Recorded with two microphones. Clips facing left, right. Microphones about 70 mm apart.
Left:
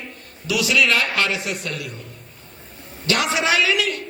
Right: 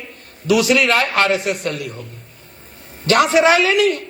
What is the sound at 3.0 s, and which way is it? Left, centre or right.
Speech, right.